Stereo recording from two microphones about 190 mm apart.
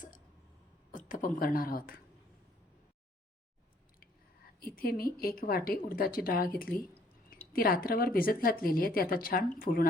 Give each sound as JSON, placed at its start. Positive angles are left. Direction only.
{"t": 0.9, "sound": "a woman's voice", "side_deg": 45}
{"t": 4.6, "sound": "speech", "side_deg": 50}